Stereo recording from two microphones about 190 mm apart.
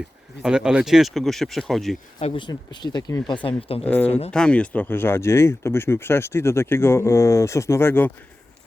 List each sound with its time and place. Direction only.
0.4 s speech: 5° right (ahead or behind)
2.1 s speech: 25° left (ahead or behind)
3.4 s speech: 30° left (ahead or behind)
3.8 s speech: 10° left (ahead or behind)